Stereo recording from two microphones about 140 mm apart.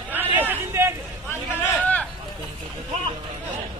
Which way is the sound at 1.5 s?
10° left (ahead or behind).